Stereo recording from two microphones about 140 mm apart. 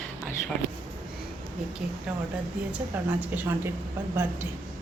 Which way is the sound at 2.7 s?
10° right (ahead or behind).